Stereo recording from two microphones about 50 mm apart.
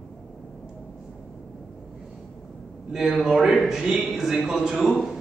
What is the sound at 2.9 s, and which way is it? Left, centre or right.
A man's voice, centre.